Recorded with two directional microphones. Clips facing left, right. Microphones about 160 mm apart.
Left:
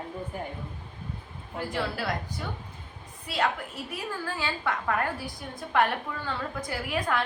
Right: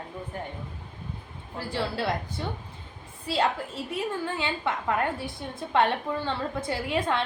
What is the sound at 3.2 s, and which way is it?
A woman's voice, 30° right (ahead or behind).